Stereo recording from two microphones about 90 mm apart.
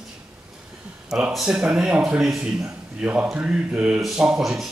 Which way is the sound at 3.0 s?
20° right (ahead or behind).